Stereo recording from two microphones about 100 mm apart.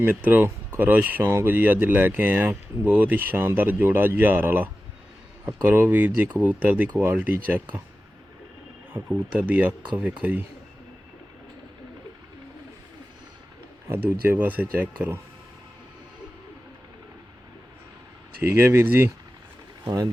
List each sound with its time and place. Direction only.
0.0 s speech: 15° right (ahead or behind)
9.4 s speech: 15° right (ahead or behind)
13.8 s speech: 25° right (ahead or behind)
18.3 s speech: 25° right (ahead or behind)
19.8 s speech: 35° right (ahead or behind)